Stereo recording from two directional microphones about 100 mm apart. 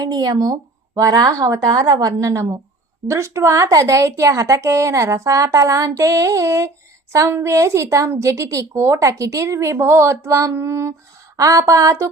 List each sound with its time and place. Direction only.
0.0 s a woman's voice: 45° right (ahead or behind)